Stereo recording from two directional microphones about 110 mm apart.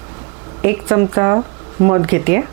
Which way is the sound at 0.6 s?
20° right (ahead or behind).